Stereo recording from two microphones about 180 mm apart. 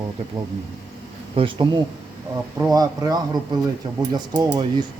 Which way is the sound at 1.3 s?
25° right (ahead or behind).